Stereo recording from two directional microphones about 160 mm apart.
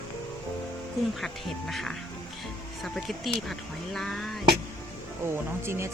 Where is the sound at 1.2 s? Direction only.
Centre (ahead or behind).